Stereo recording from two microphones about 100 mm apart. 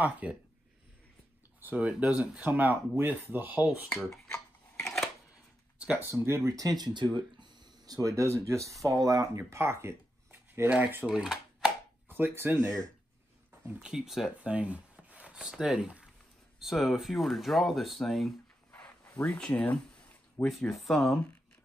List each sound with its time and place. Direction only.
0.0 s speech: 15° right (ahead or behind)
1.6 s speech: 15° right (ahead or behind)
4.3 s a sound: 5° left (ahead or behind)
6.0 s speech: 25° right (ahead or behind)
11.1 s cash register: 5° right (ahead or behind)
12.1 s speech: 20° right (ahead or behind)
12.6 s speech: 35° right (ahead or behind)
13.7 s speech: 5° right (ahead or behind)
18.7 s a sound: 15° left (ahead or behind)
20.4 s speech: centre (ahead or behind)